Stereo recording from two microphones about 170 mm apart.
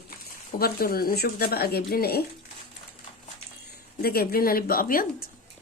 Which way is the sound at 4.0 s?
65° left (ahead or behind).